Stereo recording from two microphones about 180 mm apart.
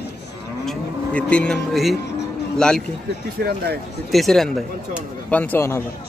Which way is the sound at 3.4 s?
60° right (ahead or behind).